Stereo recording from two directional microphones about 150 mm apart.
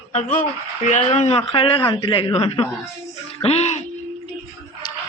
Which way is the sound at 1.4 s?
35° left (ahead or behind).